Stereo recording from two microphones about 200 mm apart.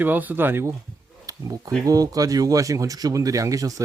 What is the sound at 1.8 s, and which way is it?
A man's voice, 20° right (ahead or behind).